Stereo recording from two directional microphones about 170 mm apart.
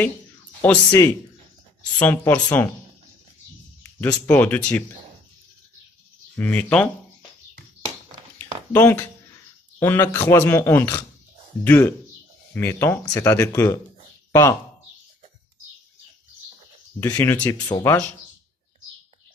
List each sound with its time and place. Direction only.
0.6 s speech: 15° left (ahead or behind)
4.3 s speech: 10° left (ahead or behind)
6.3 s speech: 10° left (ahead or behind)
8.4 s a sound: 10° left (ahead or behind)
9.8 s speech: 15° left (ahead or behind)
17.0 s speech: 15° left (ahead or behind)